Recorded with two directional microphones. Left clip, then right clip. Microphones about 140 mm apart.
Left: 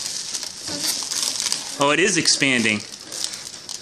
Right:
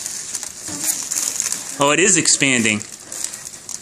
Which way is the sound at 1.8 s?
25° right (ahead or behind).